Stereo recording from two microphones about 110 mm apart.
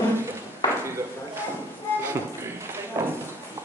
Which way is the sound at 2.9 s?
30° right (ahead or behind).